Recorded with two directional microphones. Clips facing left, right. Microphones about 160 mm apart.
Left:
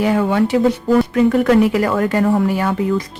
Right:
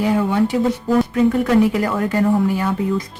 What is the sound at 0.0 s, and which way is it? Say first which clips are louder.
Speech: left 2 dB; 75° left (ahead or behind).